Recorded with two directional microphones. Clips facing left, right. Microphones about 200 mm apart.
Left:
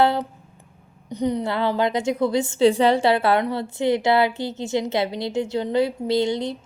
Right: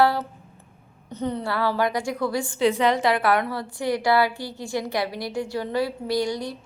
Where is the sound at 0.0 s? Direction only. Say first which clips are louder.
Left 1 dB; 20° left (ahead or behind).